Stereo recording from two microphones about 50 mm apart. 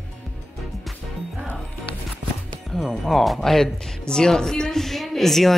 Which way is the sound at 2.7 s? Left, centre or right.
Centre.